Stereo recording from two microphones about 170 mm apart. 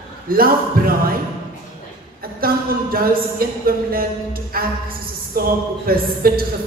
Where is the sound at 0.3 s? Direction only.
60° right (ahead or behind).